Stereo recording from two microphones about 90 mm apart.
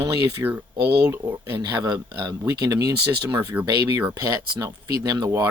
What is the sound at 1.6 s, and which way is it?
Speech, 50° right (ahead or behind).